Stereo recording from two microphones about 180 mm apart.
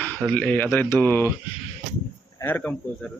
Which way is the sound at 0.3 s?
10° left (ahead or behind).